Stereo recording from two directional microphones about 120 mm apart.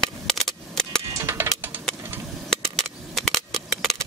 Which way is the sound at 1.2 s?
20° right (ahead or behind).